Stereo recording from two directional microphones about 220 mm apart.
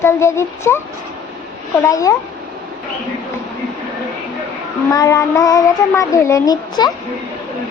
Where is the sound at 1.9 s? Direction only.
15° left (ahead or behind).